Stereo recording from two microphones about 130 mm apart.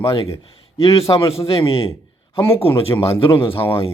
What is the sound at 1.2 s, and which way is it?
Speech, 45° left (ahead or behind).